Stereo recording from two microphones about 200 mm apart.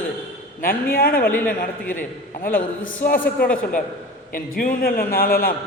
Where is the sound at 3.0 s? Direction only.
45° left (ahead or behind).